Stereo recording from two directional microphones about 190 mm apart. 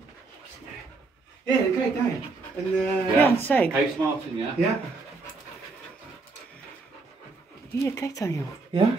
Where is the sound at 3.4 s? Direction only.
10° left (ahead or behind).